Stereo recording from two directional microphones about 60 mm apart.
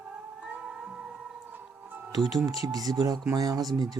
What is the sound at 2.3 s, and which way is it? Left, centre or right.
Speech, right.